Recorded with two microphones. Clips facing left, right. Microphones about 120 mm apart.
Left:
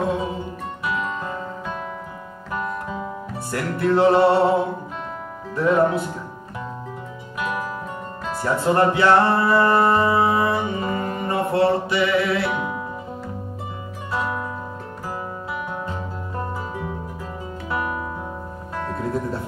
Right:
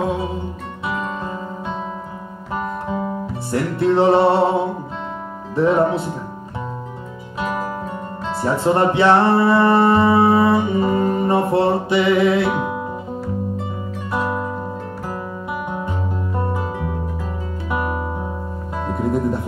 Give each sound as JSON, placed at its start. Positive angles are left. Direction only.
{"t": 0.8, "sound": "music", "side_deg": -25}
{"t": 2.5, "sound": "guitar", "side_deg": -25}
{"t": 3.5, "sound": "music", "side_deg": -25}
{"t": 5.6, "sound": "music", "side_deg": -25}
{"t": 8.3, "sound": "music", "side_deg": -25}
{"t": 14.1, "sound": "music", "side_deg": -20}
{"t": 17.6, "sound": "music", "side_deg": -20}